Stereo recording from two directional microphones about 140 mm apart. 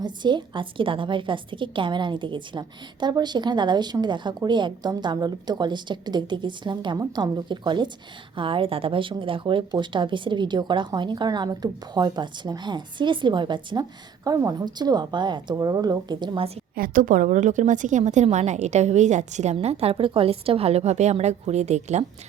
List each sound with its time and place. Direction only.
0.0 s a woman's voice: 35° right (ahead or behind)
16.7 s a woman's voice: 85° right; by 19.5 s 55° right (ahead or behind)
19.6 s a woman's voice: 45° right (ahead or behind)